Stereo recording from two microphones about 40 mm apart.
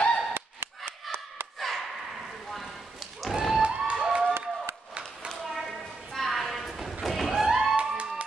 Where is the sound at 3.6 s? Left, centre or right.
Right.